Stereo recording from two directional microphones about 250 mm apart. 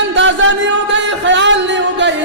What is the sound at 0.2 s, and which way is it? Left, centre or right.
Music, right.